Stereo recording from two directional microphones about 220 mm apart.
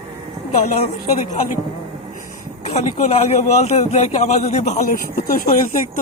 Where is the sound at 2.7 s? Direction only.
30° left (ahead or behind).